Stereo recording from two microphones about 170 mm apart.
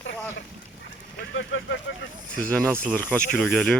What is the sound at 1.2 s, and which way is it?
Speech, 90° left.